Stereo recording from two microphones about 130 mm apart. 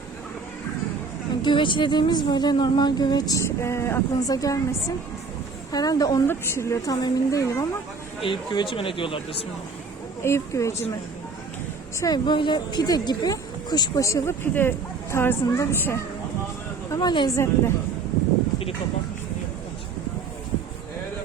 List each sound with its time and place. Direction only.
1.4 s speech: 40° left (ahead or behind)
5.7 s speech: 30° left (ahead or behind)
8.2 s speech: 40° left (ahead or behind)
10.2 s speech: 20° left (ahead or behind)
11.9 s speech: 30° left (ahead or behind)
16.9 s speech: 30° left (ahead or behind)